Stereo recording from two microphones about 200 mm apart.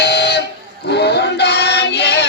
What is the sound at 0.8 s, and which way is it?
Synthetic singing, 55° left (ahead or behind).